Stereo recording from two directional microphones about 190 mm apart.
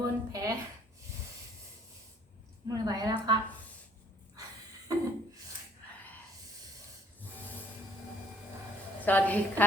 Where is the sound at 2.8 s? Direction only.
20° right (ahead or behind).